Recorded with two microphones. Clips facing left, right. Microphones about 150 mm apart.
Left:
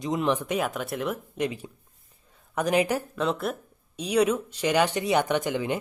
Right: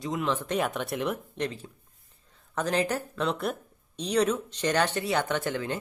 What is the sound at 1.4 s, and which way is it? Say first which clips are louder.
Speech: left 3 dB; 10° left (ahead or behind).